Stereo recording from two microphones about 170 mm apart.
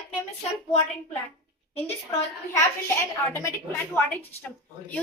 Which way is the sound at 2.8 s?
15° left (ahead or behind).